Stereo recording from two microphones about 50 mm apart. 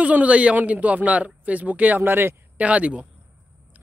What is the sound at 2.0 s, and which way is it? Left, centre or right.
Speech, right.